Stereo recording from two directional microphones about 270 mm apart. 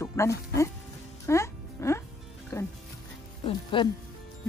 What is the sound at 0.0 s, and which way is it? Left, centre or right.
Music, centre.